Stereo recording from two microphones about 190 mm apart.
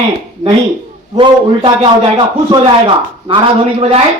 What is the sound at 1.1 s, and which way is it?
A man's voice, 25° right (ahead or behind).